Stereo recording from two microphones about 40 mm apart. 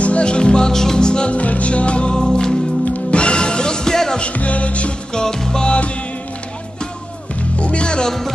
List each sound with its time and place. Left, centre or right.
0.0 s music: left
1.3 s music: left; by 4.2 s centre
4.2 s music: left
5.1 s music: centre
7.5 s music: left